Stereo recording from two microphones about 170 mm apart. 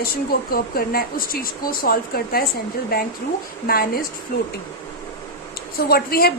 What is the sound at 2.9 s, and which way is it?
A woman's voice, 60° left (ahead or behind).